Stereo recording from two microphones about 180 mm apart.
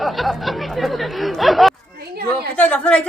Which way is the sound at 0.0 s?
Centre (ahead or behind).